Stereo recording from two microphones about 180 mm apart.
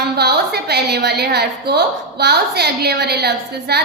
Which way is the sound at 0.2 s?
65° right (ahead or behind).